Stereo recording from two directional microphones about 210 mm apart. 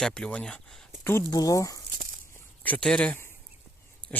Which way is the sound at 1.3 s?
15° left (ahead or behind).